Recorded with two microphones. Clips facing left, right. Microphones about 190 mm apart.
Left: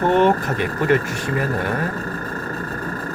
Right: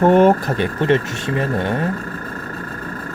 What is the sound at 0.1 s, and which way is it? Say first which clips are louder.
Speech: right 4 dB; 45° right (ahead or behind).